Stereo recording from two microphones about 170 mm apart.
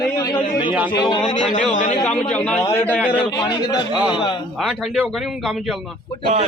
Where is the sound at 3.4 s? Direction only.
25° left (ahead or behind).